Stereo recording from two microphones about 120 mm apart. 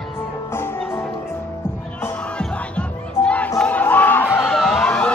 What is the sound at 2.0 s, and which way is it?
Music, 10° left (ahead or behind).